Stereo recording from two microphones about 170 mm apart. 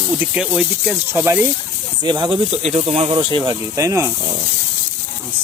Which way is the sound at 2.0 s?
25° right (ahead or behind).